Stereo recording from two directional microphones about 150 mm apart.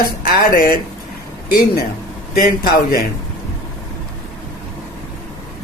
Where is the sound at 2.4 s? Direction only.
75° left (ahead or behind).